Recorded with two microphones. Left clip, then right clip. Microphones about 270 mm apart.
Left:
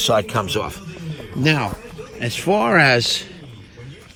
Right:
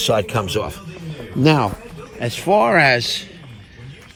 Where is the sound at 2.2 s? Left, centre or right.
Centre.